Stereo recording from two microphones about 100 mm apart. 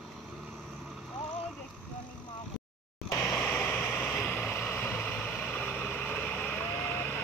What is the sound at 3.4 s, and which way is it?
Vehicle, 15° left (ahead or behind).